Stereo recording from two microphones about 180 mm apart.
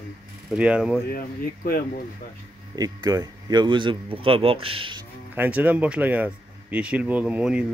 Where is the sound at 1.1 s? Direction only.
55° left (ahead or behind).